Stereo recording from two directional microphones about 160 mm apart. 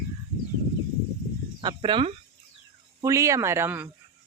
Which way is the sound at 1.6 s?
30° right (ahead or behind).